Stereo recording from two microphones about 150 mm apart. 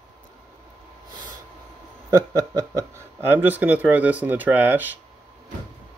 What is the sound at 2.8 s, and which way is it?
Speech, 15° right (ahead or behind).